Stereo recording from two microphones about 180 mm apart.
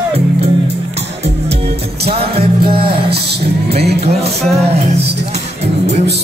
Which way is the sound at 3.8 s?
65° right (ahead or behind).